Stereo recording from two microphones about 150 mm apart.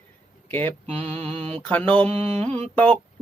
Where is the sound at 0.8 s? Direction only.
45° right (ahead or behind).